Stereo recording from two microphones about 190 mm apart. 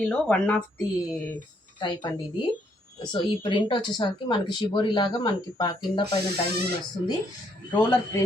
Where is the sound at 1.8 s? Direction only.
20° left (ahead or behind).